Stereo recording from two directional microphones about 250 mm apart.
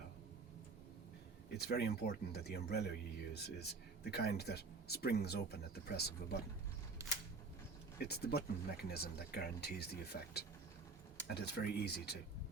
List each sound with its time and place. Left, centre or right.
1.5 s speech: left
7.0 s camera: centre
7.9 s speech: left